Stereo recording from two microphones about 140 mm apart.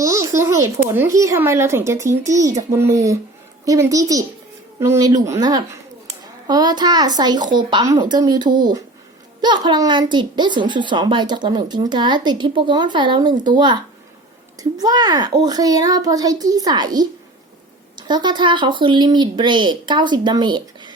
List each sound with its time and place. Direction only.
0.0 s a child's voice: 20° right (ahead or behind)